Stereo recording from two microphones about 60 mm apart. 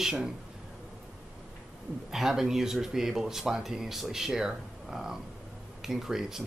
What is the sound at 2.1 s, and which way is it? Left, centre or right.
Speech, centre.